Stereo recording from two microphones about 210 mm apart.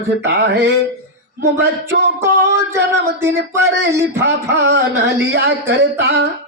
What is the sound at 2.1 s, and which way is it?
Speech, 10° right (ahead or behind).